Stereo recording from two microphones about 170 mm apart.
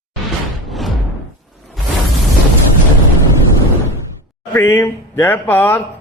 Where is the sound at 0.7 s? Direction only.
Centre (ahead or behind).